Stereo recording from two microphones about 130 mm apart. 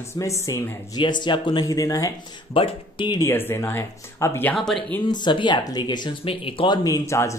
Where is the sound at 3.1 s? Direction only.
20° left (ahead or behind).